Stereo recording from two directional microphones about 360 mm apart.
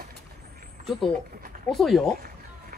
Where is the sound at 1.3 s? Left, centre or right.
Right.